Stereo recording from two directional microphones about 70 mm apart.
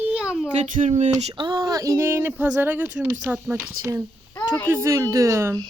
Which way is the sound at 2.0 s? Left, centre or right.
Right.